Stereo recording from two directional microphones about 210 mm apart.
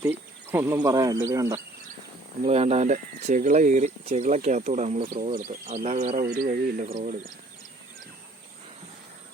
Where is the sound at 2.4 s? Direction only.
30° right (ahead or behind).